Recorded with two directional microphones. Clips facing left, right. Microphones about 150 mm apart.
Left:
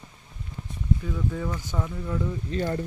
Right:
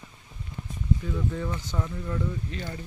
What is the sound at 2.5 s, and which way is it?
Speech, 35° left (ahead or behind).